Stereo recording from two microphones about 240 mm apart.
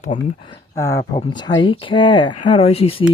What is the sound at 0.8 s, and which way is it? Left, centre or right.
Speech, centre.